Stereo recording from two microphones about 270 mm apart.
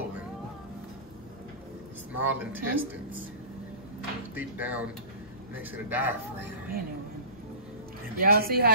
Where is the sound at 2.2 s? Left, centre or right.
Centre.